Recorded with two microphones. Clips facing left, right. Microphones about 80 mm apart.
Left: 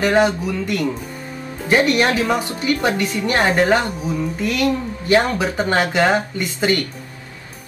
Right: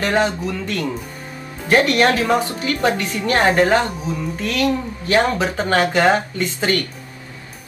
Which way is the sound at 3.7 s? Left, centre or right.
Centre.